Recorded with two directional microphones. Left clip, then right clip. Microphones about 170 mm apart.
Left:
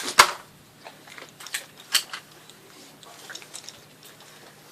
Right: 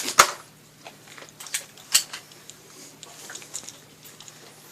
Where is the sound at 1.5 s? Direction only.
10° right (ahead or behind).